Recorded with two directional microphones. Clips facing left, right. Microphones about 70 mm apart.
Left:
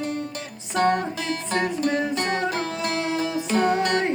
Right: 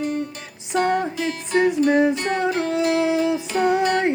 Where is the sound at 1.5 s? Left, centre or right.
Centre.